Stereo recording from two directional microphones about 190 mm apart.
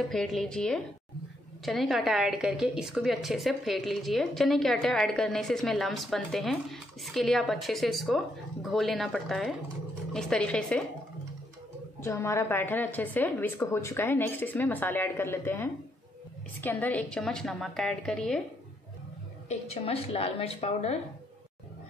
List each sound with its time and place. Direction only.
0.1 s a woman's voice: centre (ahead or behind)
12.0 s a woman's voice: 15° left (ahead or behind)
19.5 s a woman's voice: 35° left (ahead or behind)